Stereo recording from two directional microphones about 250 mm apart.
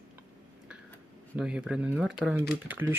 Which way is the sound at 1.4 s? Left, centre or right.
Centre.